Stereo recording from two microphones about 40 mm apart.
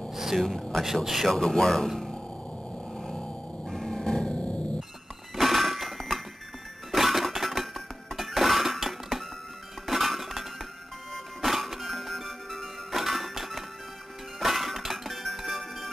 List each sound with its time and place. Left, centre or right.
0.1 s a sound: centre
0.5 s speech: centre
1.0 s speech: centre
1.3 s speech: centre
3.0 s a sound: centre
5.3 s doorbell: centre
6.9 s music: centre
9.8 s chink: centre
11.4 s music: centre